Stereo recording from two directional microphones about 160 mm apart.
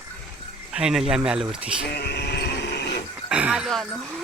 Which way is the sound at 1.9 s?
90° left.